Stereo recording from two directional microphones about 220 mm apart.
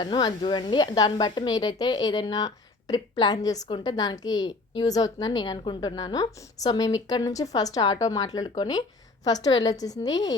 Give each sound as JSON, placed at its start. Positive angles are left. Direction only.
{"t": 0.0, "sound": "speech", "side_deg": 20}